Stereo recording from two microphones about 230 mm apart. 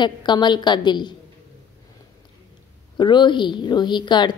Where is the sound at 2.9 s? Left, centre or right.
Centre.